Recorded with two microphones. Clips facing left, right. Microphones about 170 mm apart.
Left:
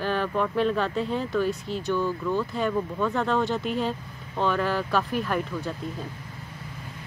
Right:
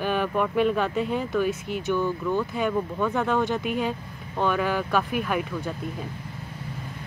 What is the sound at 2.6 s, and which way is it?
Speech, 5° right (ahead or behind).